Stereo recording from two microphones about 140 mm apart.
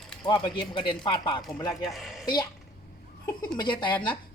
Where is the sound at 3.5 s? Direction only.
35° left (ahead or behind).